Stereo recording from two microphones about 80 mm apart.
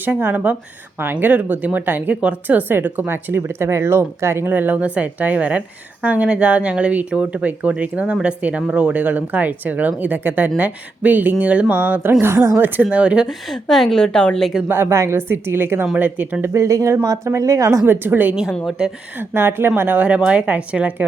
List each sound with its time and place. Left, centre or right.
0.0 s speech: right
13.5 s a woman's voice: centre
14.7 s speech: right
16.5 s a woman's voice: right
17.8 s speech: right
18.8 s speech: centre
19.3 s speech: right